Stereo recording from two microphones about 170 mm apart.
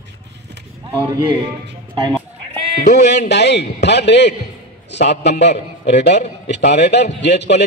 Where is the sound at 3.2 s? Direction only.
90° left.